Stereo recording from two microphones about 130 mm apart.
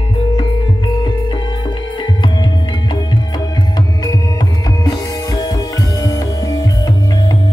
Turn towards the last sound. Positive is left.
turn(degrees=30)  # may be behind; listen again after turning